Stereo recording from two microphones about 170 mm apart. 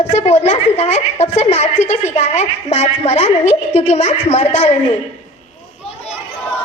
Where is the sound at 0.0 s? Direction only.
40° left (ahead or behind).